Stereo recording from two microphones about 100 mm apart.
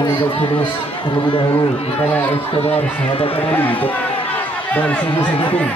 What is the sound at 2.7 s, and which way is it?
Speech, 70° left (ahead or behind).